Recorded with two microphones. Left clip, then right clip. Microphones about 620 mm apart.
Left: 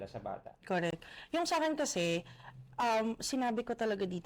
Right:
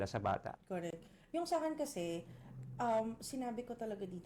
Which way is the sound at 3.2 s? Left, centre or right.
Left.